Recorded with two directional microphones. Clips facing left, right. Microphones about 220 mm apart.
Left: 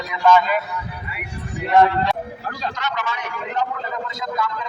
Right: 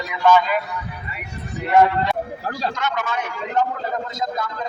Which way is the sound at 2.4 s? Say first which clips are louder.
Right 2 dB; 40° right (ahead or behind).